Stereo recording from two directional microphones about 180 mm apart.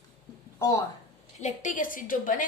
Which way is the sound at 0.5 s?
20° left (ahead or behind).